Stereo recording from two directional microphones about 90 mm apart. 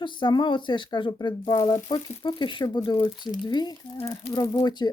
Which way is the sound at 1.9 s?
65° left (ahead or behind).